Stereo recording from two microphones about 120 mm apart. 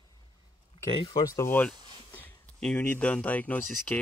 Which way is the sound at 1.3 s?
20° left (ahead or behind).